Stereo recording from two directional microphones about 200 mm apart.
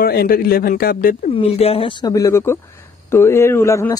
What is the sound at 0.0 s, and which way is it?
Speech, 50° left (ahead or behind).